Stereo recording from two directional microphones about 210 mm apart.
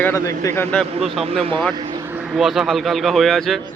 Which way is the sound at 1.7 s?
20° right (ahead or behind).